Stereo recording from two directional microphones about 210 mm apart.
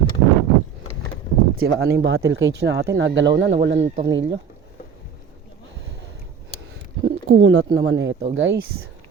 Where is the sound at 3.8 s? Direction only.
30° right (ahead or behind).